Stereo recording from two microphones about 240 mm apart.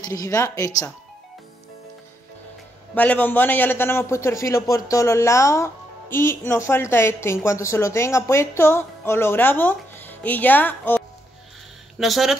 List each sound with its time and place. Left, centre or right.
0.0 s a man's voice: centre
2.9 s a man's voice: centre